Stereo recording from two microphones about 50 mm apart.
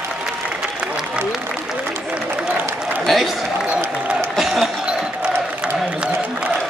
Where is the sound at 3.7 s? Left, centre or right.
Right.